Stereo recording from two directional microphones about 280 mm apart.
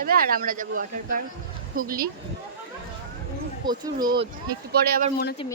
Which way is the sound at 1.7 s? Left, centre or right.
Right.